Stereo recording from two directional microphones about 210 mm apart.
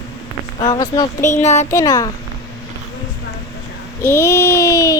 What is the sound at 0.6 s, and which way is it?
Speech, 20° left (ahead or behind).